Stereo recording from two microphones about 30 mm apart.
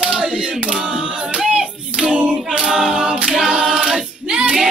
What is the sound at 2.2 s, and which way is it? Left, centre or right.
A capella, right.